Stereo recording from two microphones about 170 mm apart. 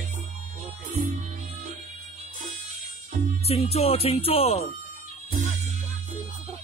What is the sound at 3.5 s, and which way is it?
Speech, 35° left (ahead or behind).